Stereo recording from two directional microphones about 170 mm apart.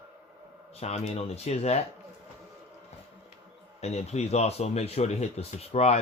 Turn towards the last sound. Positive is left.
turn(degrees=40)  # may be behind; listen again after turning